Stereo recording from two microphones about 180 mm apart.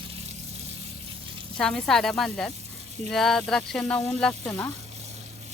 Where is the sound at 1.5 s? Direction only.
5° left (ahead or behind).